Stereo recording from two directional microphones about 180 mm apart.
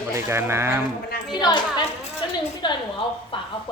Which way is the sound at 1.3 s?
25° left (ahead or behind).